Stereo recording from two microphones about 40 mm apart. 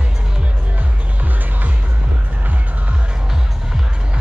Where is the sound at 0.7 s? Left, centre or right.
Right.